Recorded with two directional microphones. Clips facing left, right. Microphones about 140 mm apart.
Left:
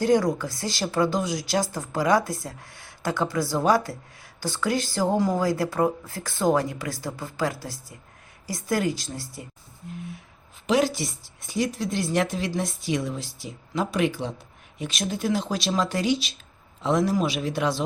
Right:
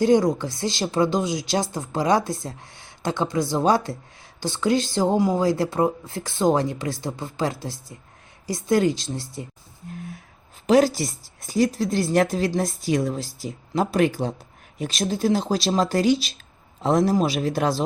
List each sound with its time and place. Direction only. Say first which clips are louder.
0.0 s speech: right 3 dB; 25° right (ahead or behind)
10.7 s speech: right 5 dB; 40° right (ahead or behind)